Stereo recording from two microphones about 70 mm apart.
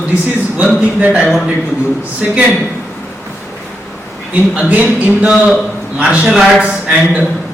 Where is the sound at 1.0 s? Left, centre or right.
Right.